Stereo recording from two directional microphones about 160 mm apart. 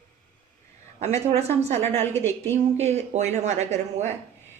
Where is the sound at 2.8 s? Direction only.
45° right (ahead or behind).